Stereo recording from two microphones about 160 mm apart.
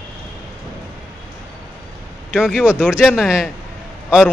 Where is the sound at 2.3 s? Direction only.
5° right (ahead or behind).